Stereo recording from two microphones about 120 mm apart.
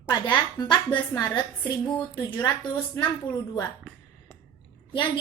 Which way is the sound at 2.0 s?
15° left (ahead or behind).